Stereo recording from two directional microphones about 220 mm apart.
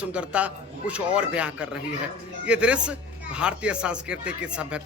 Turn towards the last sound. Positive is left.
turn(degrees=-5)  # may be behind; listen again after turning